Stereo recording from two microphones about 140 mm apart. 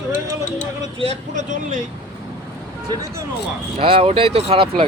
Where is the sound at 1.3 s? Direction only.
60° right (ahead or behind).